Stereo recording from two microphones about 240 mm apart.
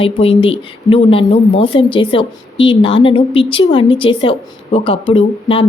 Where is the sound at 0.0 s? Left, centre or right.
Left.